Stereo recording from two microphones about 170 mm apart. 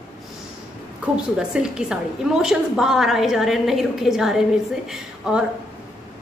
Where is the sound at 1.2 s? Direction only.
5° right (ahead or behind).